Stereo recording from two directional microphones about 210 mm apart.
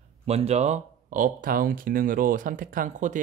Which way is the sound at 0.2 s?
30° right (ahead or behind).